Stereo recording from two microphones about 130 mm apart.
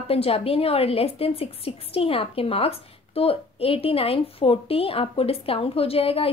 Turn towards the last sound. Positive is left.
turn(degrees=45)  # may be behind; listen again after turning